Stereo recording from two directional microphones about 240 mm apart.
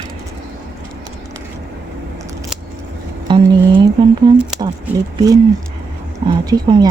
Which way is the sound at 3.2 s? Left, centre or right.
Centre.